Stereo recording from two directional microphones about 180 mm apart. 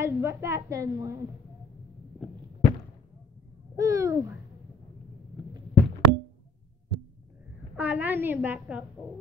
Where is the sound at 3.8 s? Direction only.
20° right (ahead or behind).